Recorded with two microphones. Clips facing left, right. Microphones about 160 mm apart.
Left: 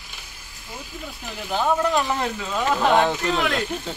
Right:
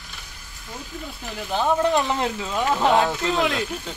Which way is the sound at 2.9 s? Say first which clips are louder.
Left 1 dB; centre (ahead or behind).